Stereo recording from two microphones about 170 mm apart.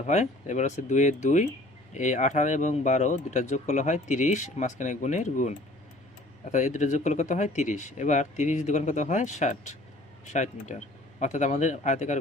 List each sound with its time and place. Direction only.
0.0 s speech: 45° left (ahead or behind)